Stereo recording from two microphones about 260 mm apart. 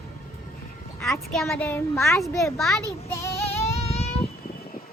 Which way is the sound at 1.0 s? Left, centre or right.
Centre.